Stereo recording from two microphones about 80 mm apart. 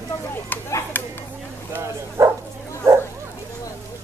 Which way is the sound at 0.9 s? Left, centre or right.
Left.